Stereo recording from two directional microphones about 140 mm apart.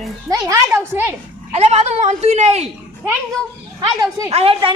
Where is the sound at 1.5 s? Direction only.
50° right (ahead or behind).